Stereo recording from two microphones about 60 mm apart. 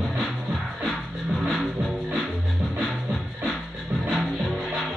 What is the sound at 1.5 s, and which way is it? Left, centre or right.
Music, centre.